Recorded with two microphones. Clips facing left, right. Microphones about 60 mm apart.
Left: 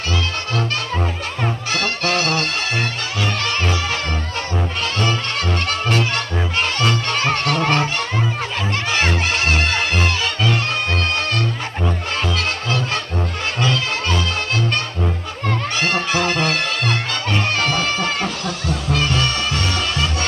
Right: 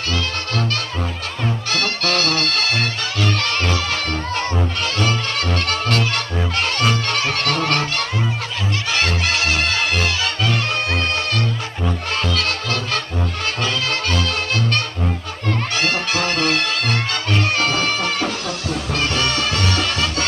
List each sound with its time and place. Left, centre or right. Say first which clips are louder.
1.7 s music: even; left
5.4 s music: even; centre
7.4 s honk: left 2 dB; centre
9.3 s music: left 1 dB; left
12.4 s music: left 1 dB; left
17.8 s a sound: even; centre
19.6 s music: right 1 dB; left